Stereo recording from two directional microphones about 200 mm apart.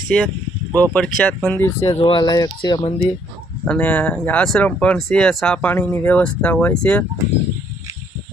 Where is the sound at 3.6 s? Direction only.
5° left (ahead or behind).